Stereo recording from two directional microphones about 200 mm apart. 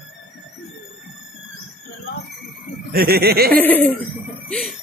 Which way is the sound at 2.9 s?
50° right (ahead or behind).